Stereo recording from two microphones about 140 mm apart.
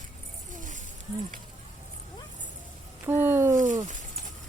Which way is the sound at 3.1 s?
15° right (ahead or behind).